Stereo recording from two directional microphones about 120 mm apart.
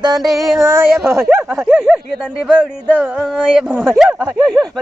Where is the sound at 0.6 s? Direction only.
25° right (ahead or behind).